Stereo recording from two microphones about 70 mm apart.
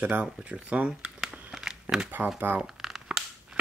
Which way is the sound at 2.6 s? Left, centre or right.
Centre.